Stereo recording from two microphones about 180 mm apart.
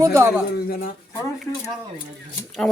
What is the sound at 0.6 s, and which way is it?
Speech, 55° left (ahead or behind).